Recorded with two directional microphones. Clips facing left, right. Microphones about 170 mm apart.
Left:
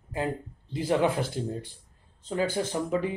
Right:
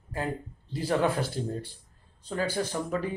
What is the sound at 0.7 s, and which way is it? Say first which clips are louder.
Speech: left 1 dB; 15° left (ahead or behind).